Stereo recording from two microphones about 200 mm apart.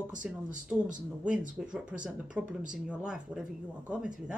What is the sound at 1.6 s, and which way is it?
Speech, 5° right (ahead or behind).